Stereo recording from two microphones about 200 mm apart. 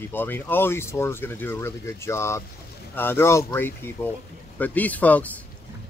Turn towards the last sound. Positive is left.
turn(degrees=10)  # may be behind; listen again after turning